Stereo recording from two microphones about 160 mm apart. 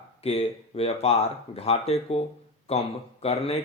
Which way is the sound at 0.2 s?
40° left (ahead or behind).